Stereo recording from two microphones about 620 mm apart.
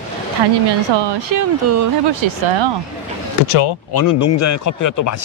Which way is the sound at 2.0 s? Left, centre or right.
Right.